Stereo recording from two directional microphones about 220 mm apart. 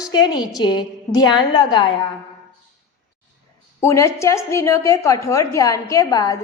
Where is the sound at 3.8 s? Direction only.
15° left (ahead or behind).